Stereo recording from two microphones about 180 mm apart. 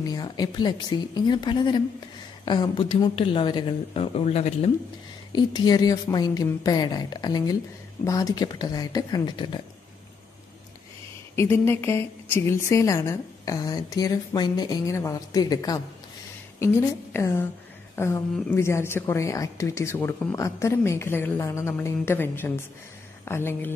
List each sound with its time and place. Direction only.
0.0 s a woman's voice: 20° left (ahead or behind)
5.3 s a woman's voice: 20° left (ahead or behind)
11.3 s a woman's voice: 15° left (ahead or behind)